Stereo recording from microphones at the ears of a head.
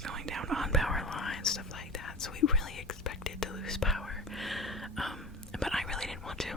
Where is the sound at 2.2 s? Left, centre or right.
Left.